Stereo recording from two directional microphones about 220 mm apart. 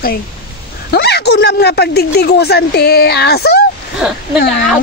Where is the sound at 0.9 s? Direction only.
50° left (ahead or behind).